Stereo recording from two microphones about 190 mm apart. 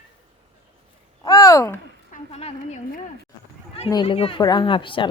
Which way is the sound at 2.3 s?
35° left (ahead or behind).